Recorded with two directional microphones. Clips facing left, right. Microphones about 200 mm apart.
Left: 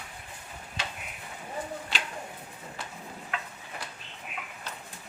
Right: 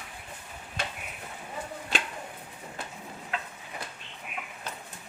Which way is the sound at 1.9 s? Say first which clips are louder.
Right 7 dB; 50° right (ahead or behind).